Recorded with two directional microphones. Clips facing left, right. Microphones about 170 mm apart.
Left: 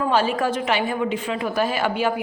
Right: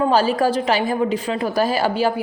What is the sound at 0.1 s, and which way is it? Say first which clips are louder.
A woman's voice: right 4 dB; 35° right (ahead or behind).